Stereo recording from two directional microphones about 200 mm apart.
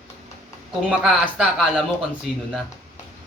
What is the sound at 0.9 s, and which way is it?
Speech, 5° right (ahead or behind).